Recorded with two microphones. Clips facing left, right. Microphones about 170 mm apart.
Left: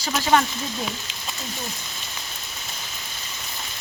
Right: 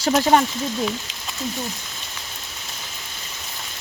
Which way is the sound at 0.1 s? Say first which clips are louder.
Right 4 dB; 40° right (ahead or behind).